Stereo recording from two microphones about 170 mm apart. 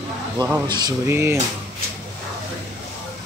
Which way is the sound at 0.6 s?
25° right (ahead or behind).